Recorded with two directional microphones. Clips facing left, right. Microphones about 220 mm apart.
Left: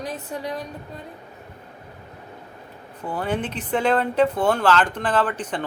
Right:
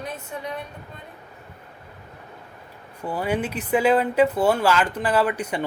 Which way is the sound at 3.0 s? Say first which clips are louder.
Right 1 dB; 10° right (ahead or behind).